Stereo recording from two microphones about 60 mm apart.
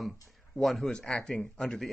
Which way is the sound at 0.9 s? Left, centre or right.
Centre.